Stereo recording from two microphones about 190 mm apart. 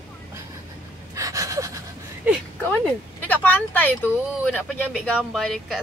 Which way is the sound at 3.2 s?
10° left (ahead or behind).